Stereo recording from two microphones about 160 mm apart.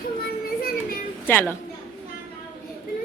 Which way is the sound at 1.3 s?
10° left (ahead or behind).